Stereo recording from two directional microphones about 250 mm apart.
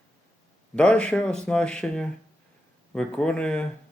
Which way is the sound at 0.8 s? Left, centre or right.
Centre.